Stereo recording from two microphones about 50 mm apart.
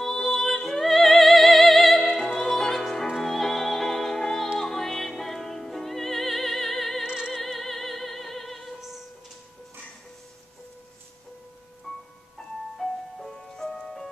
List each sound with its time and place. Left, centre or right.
0.0 s music: centre
0.4 s opera: centre
4.6 s music: centre
7.1 s music: centre
7.3 s music: centre
11.9 s music: centre